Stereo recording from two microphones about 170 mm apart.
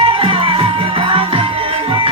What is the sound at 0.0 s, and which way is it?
Music, 30° right (ahead or behind).